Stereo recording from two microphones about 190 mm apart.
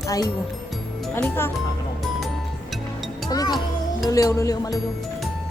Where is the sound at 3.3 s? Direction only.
20° left (ahead or behind).